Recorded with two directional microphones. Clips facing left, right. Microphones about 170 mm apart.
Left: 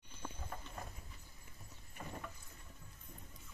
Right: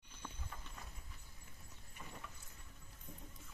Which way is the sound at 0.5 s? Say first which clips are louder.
Left 6 dB; 50° left (ahead or behind).